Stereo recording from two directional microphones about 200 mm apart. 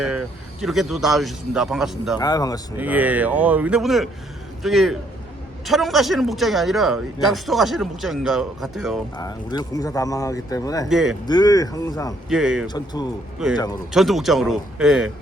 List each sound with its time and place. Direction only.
0.0 s a man's voice: 5° right (ahead or behind)
2.1 s speech: 20° left (ahead or behind)
2.7 s a man's voice: 10° right (ahead or behind)
9.1 s speech: 20° left (ahead or behind)
10.8 s a man's voice: centre (ahead or behind)
11.3 s speech: 20° left (ahead or behind)
12.3 s a man's voice: 5° right (ahead or behind)
12.6 s speech: 20° left (ahead or behind)
13.9 s a man's voice: centre (ahead or behind)